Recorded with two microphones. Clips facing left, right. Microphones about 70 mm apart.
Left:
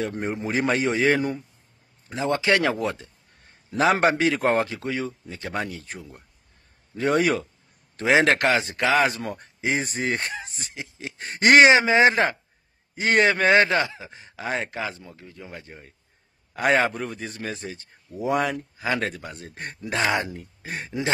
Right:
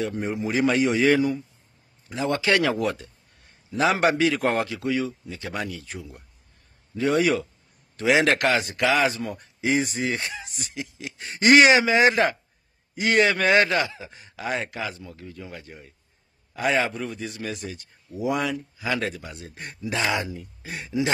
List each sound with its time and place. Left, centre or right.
0.0 s a man's voice: left
3.7 s a man's voice: left
7.9 s a man's voice: left
9.0 s a man's voice: left
9.6 s speech: left
9.8 s a man's voice: left
10.5 s speech: left
11.2 s a man's voice: left
11.6 s speech: left
16.5 s a man's voice: left